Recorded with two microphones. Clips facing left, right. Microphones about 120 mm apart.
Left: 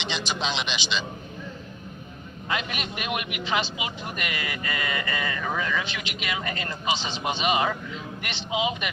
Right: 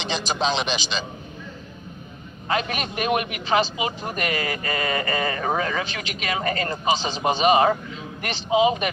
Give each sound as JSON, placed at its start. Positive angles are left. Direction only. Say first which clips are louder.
{"t": 0.0, "sound": "a man's voice", "louder": "right 5 dB", "side_deg": -40}
{"t": 2.5, "sound": "a man's voice", "louder": "right 5 dB", "side_deg": -40}